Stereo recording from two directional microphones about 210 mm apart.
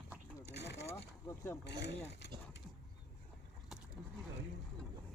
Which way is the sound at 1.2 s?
15° left (ahead or behind).